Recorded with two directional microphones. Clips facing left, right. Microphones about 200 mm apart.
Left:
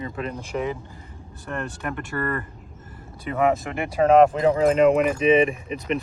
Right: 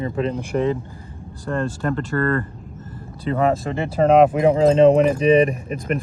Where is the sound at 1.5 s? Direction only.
15° left (ahead or behind).